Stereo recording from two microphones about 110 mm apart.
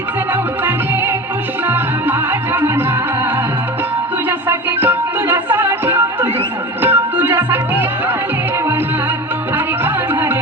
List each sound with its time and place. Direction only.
1.6 s music: 20° right (ahead or behind)
4.3 s music: 20° right (ahead or behind)
9.8 s music: 20° right (ahead or behind)